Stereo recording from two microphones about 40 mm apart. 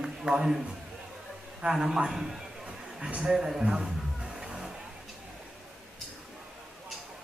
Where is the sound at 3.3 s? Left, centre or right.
Centre.